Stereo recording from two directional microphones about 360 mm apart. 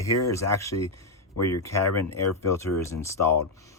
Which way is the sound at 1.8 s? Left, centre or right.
Left.